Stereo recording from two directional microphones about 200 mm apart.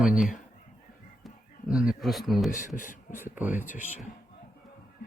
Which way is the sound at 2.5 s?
40° left (ahead or behind).